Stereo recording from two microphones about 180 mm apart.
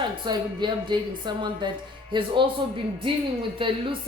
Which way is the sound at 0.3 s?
25° right (ahead or behind).